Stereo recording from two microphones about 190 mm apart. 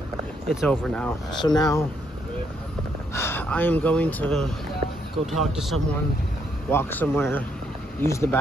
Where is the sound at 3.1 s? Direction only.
10° left (ahead or behind).